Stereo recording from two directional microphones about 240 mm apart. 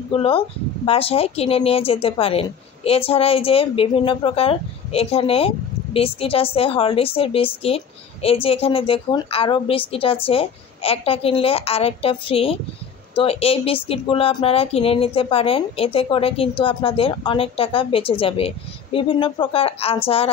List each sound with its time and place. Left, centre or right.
0.1 s speech: left